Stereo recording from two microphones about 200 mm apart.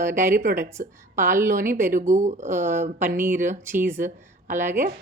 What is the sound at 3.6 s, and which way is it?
Speech, 10° right (ahead or behind).